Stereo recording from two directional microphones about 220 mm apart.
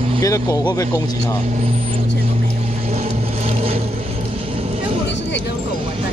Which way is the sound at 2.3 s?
30° right (ahead or behind).